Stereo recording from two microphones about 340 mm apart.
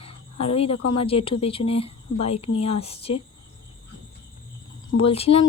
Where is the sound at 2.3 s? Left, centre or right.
Left.